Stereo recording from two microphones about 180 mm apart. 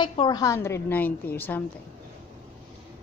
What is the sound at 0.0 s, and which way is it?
Speech, 25° left (ahead or behind).